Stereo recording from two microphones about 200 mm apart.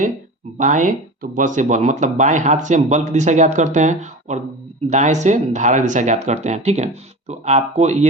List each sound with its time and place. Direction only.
0.6 s speech: 40° right (ahead or behind)